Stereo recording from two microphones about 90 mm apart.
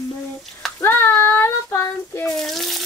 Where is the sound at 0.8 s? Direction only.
25° left (ahead or behind).